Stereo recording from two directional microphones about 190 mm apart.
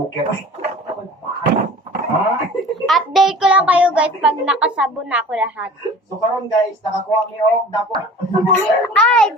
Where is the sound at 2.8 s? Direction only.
Centre (ahead or behind).